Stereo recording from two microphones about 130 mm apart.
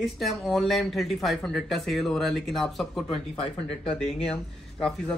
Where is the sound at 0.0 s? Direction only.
Centre (ahead or behind).